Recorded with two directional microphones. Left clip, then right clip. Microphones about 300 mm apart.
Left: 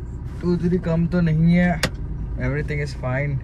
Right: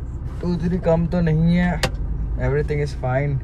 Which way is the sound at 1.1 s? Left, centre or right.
Centre.